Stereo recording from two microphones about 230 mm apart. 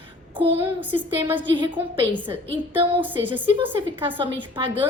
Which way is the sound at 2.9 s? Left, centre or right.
Centre.